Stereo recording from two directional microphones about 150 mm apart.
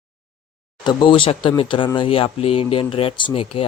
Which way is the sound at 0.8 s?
30° left (ahead or behind).